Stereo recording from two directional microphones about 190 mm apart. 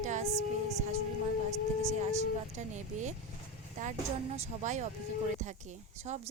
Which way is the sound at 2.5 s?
40° right (ahead or behind).